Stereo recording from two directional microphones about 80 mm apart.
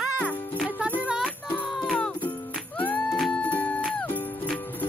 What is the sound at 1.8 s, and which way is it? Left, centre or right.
Music, centre.